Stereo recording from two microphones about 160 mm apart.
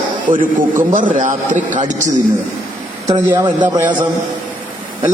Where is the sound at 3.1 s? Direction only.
20° right (ahead or behind).